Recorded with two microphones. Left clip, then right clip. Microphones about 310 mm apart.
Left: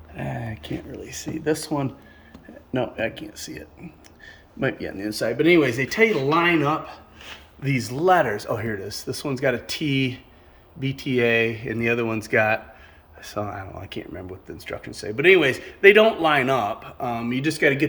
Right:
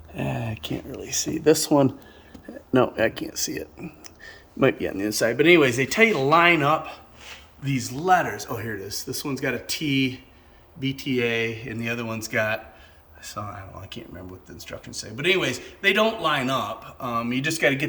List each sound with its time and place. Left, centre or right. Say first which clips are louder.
0.1 s a sound: right 2 dB; right
0.3 s speech: right 1 dB; centre
2.9 s speech: right 4 dB; centre
7.6 s a man's voice: left 5 dB; centre